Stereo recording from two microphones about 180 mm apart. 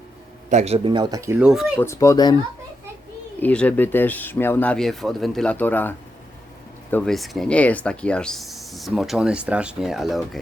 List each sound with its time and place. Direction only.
0.5 s speech: 35° right (ahead or behind); by 1.5 s 15° right (ahead or behind)
1.5 s speech: 5° right (ahead or behind)
1.8 s speech: 15° left (ahead or behind)
3.4 s speech: 5° left (ahead or behind)
6.9 s speech: 5° left (ahead or behind)